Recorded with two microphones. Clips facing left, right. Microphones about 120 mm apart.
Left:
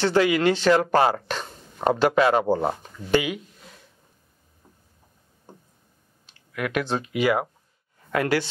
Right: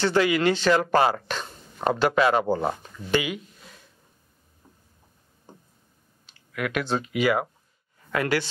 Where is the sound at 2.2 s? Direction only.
40° left (ahead or behind).